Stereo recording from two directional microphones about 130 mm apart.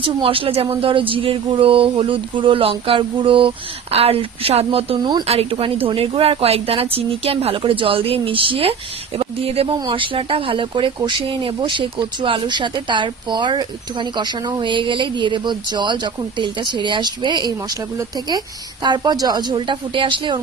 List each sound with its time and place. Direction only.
0.0 s speech: 40° right (ahead or behind)